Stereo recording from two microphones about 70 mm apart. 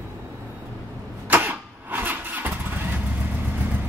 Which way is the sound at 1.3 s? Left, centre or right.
Right.